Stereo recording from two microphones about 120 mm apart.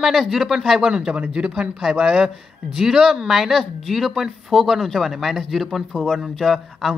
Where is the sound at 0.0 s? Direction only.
Centre (ahead or behind).